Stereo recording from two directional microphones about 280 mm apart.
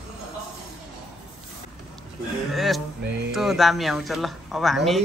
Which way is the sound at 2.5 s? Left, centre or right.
Centre.